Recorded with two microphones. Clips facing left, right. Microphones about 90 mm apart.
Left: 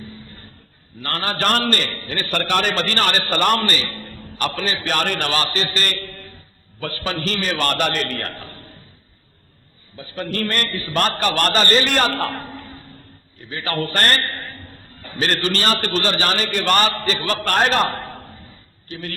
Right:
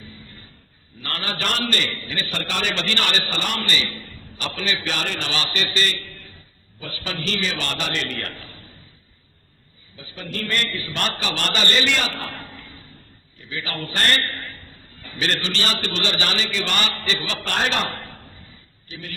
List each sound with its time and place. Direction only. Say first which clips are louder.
1.0 s a man's voice: left 6 dB; 40° left (ahead or behind)
10.0 s a man's voice: left 7 dB; 55° left (ahead or behind)
12.4 s a sound: left 6 dB; 40° left (ahead or behind)
13.5 s a man's voice: left 6 dB; 50° left (ahead or behind)